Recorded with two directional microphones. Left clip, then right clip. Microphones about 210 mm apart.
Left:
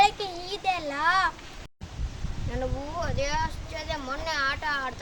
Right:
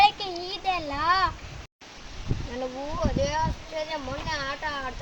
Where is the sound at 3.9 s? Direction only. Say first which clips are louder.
Left 1 dB; 5° right (ahead or behind).